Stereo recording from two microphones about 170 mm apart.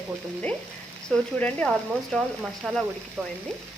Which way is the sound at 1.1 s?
5° left (ahead or behind).